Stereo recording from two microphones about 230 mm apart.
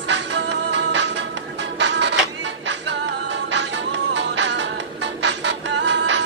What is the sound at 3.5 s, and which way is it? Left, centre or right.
Music, right.